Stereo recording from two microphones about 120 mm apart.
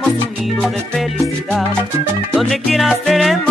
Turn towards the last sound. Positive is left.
turn(degrees=0)  # may be behind; listen again after turning